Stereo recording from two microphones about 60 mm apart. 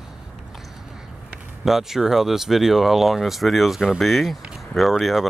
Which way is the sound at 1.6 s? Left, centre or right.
Centre.